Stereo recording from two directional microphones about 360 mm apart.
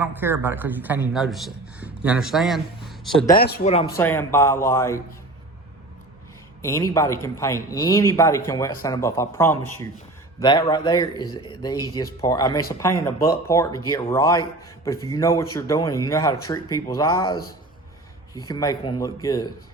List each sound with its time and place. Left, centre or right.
0.0 s a man's voice: centre
3.3 s speech: left
3.9 s a man's voice: centre
6.6 s a man's voice: centre
18.4 s a man's voice: centre